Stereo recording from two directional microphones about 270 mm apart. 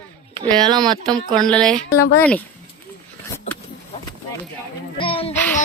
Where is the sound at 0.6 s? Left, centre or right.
Centre.